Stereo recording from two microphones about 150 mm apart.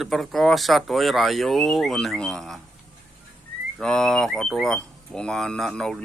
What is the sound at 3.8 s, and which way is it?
Speech, 5° left (ahead or behind).